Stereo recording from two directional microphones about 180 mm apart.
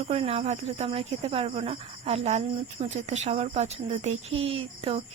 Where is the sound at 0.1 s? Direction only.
35° right (ahead or behind).